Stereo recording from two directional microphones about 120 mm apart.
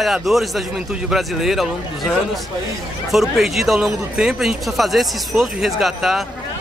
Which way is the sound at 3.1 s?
Centre (ahead or behind).